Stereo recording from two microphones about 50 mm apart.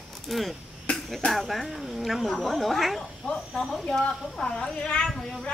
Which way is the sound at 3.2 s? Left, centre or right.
Centre.